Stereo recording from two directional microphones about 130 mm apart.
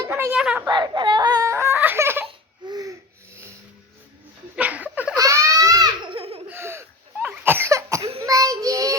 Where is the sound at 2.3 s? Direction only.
35° right (ahead or behind).